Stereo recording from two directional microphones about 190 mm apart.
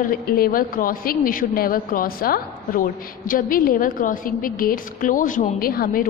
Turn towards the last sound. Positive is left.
turn(degrees=50)  # may be behind; listen again after turning